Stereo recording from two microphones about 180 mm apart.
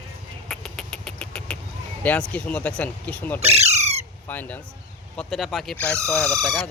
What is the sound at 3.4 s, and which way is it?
Squawk, 35° right (ahead or behind).